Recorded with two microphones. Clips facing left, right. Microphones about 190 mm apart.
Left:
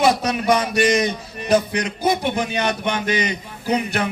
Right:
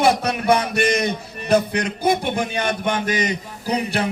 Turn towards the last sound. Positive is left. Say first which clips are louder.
# left 1 dB
turn(degrees=-35)  # may be behind; listen again after turning